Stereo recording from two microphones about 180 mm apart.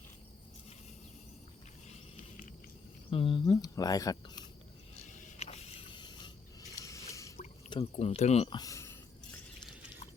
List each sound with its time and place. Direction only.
3.1 s speech: 30° left (ahead or behind)
5.1 s a sound: 35° left (ahead or behind); by 7.3 s 15° left (ahead or behind)
7.7 s speech: 35° left (ahead or behind)
8.5 s speech: 20° left (ahead or behind)